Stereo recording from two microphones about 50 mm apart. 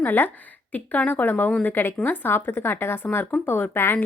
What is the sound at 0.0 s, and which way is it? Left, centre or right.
A woman's voice, left.